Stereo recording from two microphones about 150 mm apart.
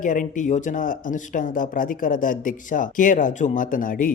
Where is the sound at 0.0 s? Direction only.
60° left (ahead or behind).